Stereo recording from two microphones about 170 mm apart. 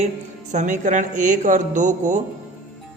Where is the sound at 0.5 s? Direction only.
45° right (ahead or behind).